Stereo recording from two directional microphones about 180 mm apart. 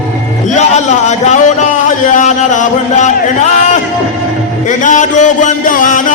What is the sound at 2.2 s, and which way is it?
Music, 45° left (ahead or behind).